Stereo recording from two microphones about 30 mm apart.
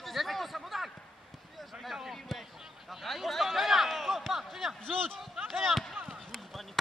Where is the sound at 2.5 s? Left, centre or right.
Centre.